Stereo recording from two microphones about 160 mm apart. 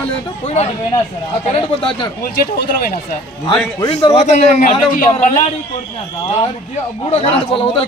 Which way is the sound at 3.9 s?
40° left (ahead or behind).